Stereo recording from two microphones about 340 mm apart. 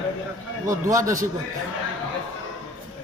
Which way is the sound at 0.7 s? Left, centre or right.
Centre.